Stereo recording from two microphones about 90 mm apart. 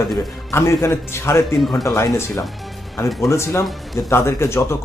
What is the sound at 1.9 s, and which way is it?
Speech, 30° left (ahead or behind).